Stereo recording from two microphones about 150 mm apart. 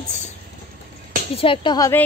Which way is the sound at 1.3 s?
35° left (ahead or behind).